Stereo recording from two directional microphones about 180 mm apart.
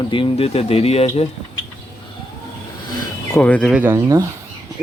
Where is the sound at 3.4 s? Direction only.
5° left (ahead or behind).